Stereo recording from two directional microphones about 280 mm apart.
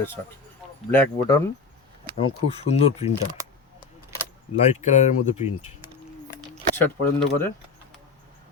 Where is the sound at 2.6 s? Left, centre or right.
Left.